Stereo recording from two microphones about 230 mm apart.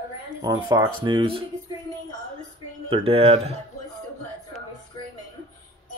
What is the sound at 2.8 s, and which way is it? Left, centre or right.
Speech, right.